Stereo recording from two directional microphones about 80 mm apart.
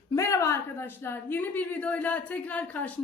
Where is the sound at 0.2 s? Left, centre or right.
Left.